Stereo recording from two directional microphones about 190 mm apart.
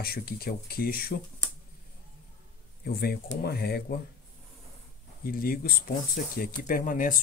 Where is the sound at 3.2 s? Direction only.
65° left (ahead or behind).